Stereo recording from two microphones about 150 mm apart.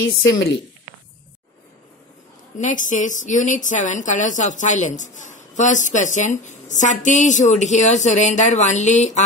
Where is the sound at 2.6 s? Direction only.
55° left (ahead or behind).